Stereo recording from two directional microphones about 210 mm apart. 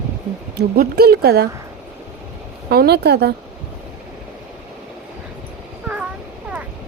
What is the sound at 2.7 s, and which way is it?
Speech, 50° right (ahead or behind).